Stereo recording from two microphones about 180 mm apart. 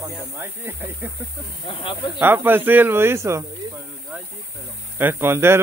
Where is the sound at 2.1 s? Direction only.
10° right (ahead or behind).